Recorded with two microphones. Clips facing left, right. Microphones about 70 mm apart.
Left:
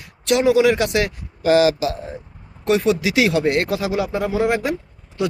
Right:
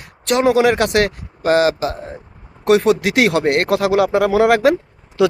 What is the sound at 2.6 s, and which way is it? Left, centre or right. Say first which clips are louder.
Speech: right 4 dB; right.